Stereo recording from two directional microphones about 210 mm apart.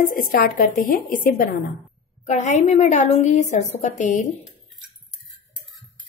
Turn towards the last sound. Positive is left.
turn(degrees=35)  # may be behind; listen again after turning